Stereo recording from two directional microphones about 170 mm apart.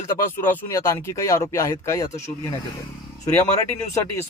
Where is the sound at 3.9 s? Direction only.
15° left (ahead or behind).